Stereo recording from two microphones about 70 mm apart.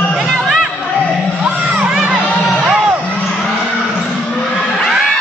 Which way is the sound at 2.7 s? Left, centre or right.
Centre.